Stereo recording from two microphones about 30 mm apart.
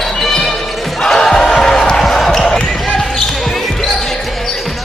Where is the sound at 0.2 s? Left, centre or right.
Centre.